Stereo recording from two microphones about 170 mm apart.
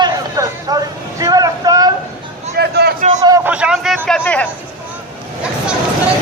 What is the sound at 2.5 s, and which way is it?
Speech, 70° right (ahead or behind).